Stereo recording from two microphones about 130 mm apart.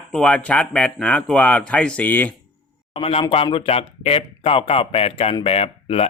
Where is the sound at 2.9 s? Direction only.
45° left (ahead or behind).